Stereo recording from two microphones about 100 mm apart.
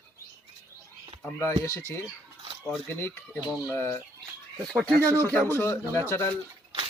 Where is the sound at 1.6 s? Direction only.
25° left (ahead or behind).